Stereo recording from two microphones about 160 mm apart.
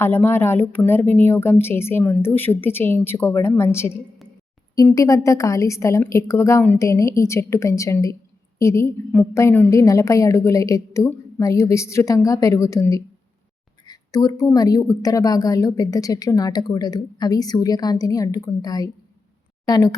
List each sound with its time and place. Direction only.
0.0 s a woman's voice: 15° left (ahead or behind)